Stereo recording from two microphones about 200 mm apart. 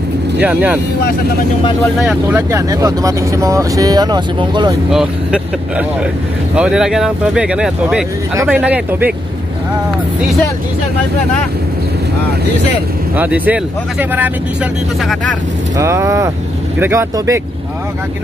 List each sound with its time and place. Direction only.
0.4 s speech: 10° right (ahead or behind)
2.0 s speech: 10° right (ahead or behind)
4.9 s speech: 5° right (ahead or behind)
13.1 s speech: 10° right (ahead or behind)
15.8 s speech: 15° right (ahead or behind)